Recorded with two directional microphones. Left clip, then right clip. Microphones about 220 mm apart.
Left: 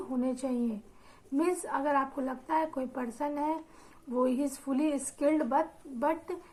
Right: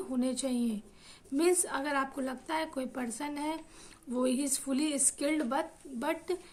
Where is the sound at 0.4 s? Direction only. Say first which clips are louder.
Left 1 dB; 55° right (ahead or behind).